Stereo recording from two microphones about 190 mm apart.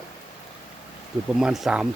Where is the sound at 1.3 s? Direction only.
Centre (ahead or behind).